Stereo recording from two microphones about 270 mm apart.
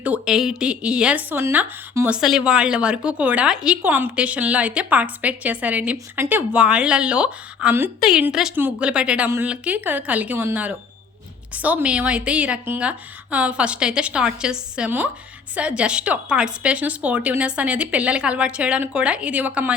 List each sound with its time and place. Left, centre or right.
0.0 s speech: centre